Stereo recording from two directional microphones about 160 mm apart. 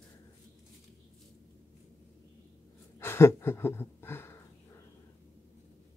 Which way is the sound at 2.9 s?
15° left (ahead or behind).